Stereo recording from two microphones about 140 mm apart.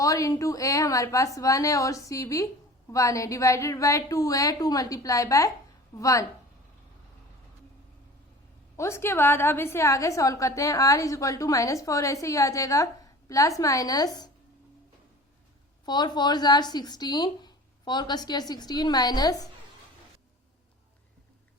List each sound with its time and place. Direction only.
0.0 s a woman's voice: 25° left (ahead or behind)
8.7 s a woman's voice: 20° left (ahead or behind)
15.9 s a woman's voice: 30° left (ahead or behind)